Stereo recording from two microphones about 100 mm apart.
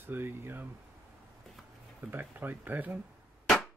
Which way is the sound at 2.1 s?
20° right (ahead or behind).